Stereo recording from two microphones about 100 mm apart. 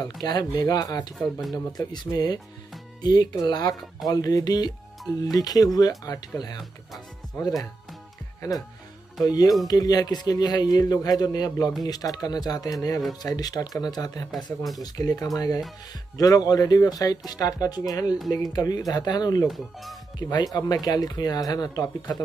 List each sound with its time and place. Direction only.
0.0 s speech: 45° left (ahead or behind)
1.1 s speech: centre (ahead or behind)
1.7 s a man's voice: 45° left (ahead or behind)
8.4 s a man's voice: 35° left (ahead or behind)
14.3 s speech: centre (ahead or behind)
14.8 s a man's voice: 40° left (ahead or behind)
19.4 s speech: centre (ahead or behind)
20.2 s a man's voice: 45° left (ahead or behind)